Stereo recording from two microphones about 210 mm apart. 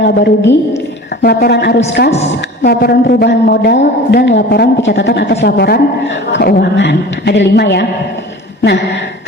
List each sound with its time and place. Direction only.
0.0 s a woman's voice: 55° left (ahead or behind)
2.0 s a woman's voice: 30° left (ahead or behind)
2.6 s a woman's voice: 50° left (ahead or behind)